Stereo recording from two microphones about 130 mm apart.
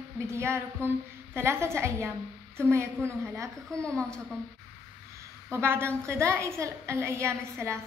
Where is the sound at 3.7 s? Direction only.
5° left (ahead or behind).